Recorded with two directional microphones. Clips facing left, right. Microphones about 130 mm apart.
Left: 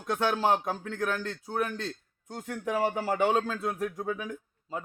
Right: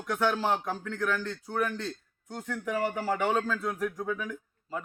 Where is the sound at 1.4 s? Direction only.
15° left (ahead or behind).